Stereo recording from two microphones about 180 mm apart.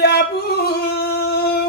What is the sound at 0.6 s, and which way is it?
Singing, 60° left (ahead or behind).